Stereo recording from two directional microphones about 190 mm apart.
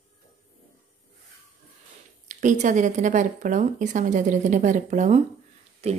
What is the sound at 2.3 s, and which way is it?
Speech, 40° right (ahead or behind).